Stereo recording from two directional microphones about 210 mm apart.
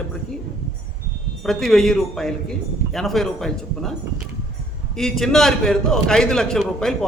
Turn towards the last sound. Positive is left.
turn(degrees=0)  # may be behind; listen again after turning